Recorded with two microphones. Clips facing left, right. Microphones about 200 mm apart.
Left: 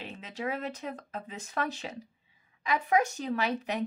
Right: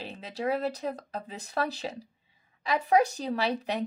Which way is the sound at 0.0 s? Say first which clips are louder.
Right 4 dB; 35° right (ahead or behind).